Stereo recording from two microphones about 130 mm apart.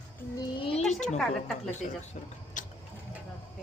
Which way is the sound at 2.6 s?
80° left.